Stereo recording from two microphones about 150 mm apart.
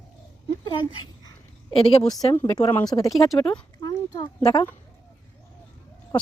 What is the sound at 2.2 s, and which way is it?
Speech, 25° left (ahead or behind).